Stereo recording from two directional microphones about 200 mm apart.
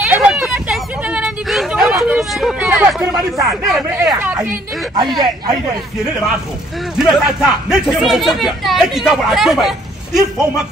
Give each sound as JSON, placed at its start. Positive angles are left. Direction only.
{"t": 0.1, "sound": "hubbub", "side_deg": -5}
{"t": 4.1, "sound": "a woman's voice", "side_deg": -10}
{"t": 5.0, "sound": "speech", "side_deg": -20}
{"t": 7.0, "sound": "speech", "side_deg": 0}